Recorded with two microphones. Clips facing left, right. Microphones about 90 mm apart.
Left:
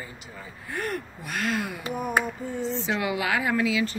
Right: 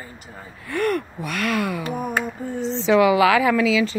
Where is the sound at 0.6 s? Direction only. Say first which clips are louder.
Right 9 dB; 75° right (ahead or behind).